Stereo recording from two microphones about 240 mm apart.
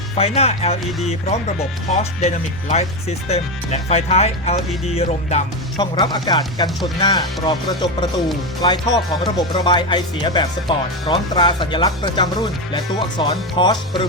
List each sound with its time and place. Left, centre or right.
0.2 s speech: left
2.0 s speech: left
5.7 s speech: centre